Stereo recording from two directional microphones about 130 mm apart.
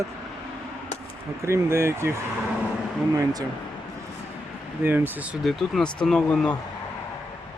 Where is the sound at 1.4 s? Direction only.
20° right (ahead or behind).